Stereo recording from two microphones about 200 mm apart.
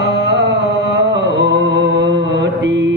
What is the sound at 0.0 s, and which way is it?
Music, 60° right (ahead or behind).